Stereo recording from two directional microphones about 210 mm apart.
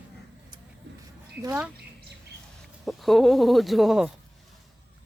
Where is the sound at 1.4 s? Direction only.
15° right (ahead or behind).